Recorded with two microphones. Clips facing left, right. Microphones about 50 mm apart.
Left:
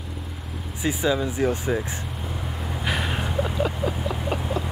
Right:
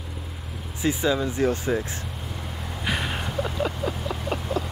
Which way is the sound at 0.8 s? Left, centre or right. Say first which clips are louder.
Even; centre.